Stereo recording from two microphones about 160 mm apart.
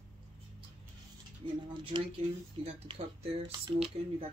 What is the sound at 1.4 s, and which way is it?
Speech, 30° right (ahead or behind).